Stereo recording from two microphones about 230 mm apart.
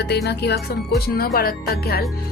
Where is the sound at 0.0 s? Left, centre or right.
Left.